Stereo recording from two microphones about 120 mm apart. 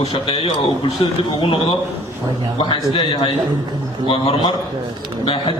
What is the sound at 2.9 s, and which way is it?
A man's voice, 45° left (ahead or behind).